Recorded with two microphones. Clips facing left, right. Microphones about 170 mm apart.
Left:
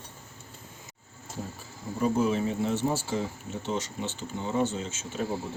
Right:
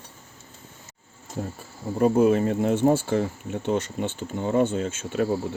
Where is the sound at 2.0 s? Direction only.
55° right (ahead or behind).